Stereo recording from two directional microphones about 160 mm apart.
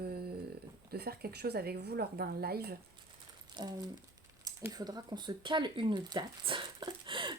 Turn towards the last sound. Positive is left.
turn(degrees=-30)  # may be behind; listen again after turning